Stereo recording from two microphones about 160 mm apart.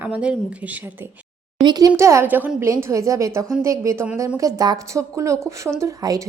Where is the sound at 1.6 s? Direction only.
25° right (ahead or behind).